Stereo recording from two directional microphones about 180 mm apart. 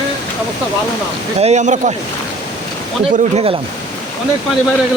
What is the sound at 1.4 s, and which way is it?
Speech, 40° right (ahead or behind).